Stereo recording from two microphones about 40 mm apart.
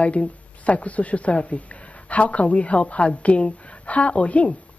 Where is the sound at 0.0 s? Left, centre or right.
Left.